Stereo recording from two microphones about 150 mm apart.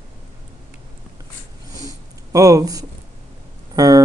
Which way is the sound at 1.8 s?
25° right (ahead or behind).